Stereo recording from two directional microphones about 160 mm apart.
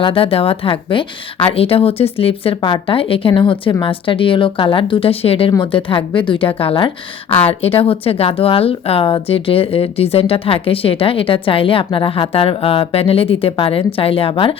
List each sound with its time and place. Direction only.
0.0 s speech: 35° left (ahead or behind)